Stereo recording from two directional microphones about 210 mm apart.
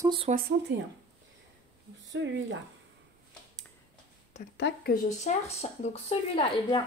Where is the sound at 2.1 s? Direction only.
60° right (ahead or behind).